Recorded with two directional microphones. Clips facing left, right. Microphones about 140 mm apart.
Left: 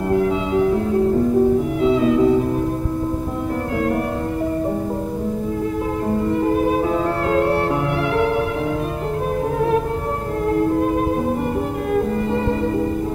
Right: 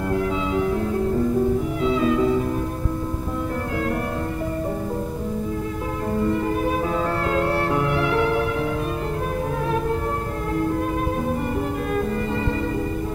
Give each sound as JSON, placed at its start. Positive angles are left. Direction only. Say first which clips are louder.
{"t": 1.8, "sound": "music", "louder": "left 4 dB", "side_deg": 25}
{"t": 7.3, "sound": "music", "louder": "left 5 dB", "side_deg": 20}